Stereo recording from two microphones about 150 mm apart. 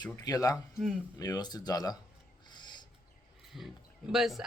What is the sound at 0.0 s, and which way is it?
Speech, 25° left (ahead or behind).